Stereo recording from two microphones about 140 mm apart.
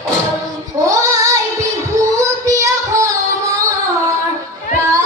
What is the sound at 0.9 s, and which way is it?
Child singing, 25° right (ahead or behind).